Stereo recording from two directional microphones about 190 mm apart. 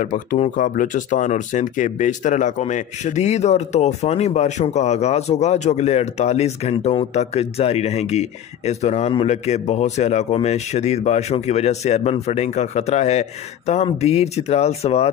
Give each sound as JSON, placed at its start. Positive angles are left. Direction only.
{"t": 0.0, "sound": "speech", "side_deg": 40}